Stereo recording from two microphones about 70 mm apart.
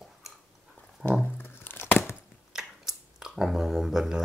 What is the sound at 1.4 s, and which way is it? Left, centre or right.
Tearing, left.